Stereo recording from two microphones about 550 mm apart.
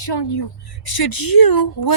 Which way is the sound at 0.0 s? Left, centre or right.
Left.